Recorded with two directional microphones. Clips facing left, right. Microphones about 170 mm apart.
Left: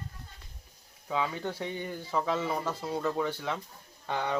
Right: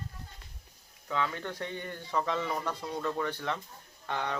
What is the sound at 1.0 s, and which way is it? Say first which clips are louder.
Speech: left 2 dB; 10° left (ahead or behind).